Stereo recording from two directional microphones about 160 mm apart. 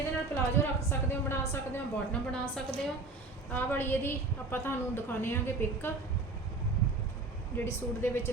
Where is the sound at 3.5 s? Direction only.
15° left (ahead or behind).